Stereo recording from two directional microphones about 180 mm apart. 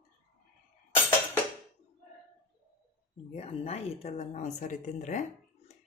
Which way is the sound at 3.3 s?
35° left (ahead or behind).